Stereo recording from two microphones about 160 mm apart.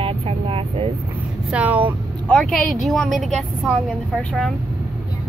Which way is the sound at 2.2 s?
5° left (ahead or behind).